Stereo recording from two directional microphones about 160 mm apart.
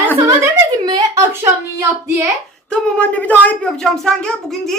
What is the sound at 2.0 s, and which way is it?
Speech, 20° right (ahead or behind).